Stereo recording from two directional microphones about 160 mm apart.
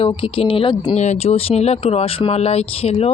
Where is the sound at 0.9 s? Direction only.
45° left (ahead or behind).